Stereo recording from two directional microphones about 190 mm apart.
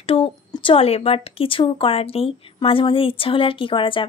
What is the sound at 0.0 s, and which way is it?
A woman's voice, 30° left (ahead or behind).